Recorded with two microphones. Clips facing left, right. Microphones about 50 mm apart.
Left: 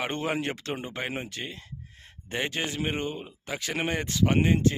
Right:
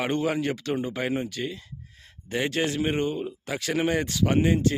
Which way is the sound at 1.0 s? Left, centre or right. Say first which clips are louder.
Right 6 dB; centre.